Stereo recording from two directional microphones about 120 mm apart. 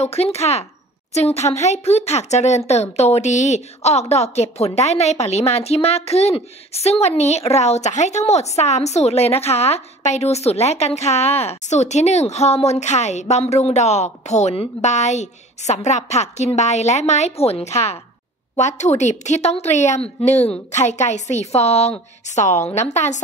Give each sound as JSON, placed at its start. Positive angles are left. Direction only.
{"t": 0.0, "sound": "a woman's voice", "side_deg": 60}
{"t": 14.9, "sound": "a woman's voice", "side_deg": 75}
{"t": 18.6, "sound": "a woman's voice", "side_deg": 75}
{"t": 22.3, "sound": "a woman's voice", "side_deg": 80}